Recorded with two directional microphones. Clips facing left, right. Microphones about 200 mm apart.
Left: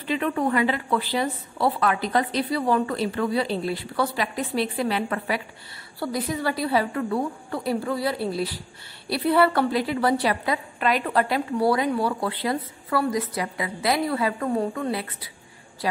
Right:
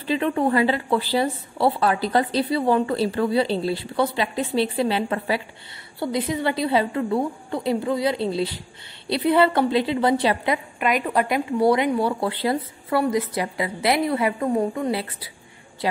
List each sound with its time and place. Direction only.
0.0 s a woman's voice: 30° right (ahead or behind)